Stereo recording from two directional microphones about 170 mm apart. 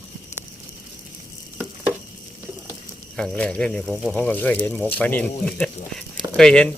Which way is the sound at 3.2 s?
5° left (ahead or behind).